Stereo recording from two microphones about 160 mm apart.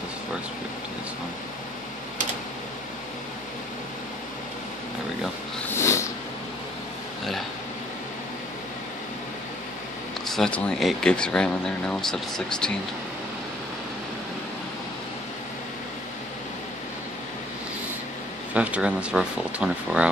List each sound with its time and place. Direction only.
5.8 s a sound: 15° left (ahead or behind)
10.3 s speech: 5° left (ahead or behind)
18.5 s speech: 10° right (ahead or behind)